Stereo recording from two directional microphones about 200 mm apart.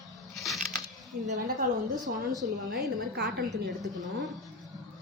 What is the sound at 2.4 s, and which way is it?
A woman's voice, 45° right (ahead or behind).